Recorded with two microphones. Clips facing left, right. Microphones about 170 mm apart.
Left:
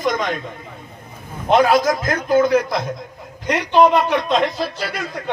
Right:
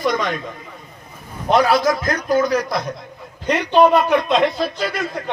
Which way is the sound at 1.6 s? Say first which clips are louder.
Left 1 dB; 45° left (ahead or behind).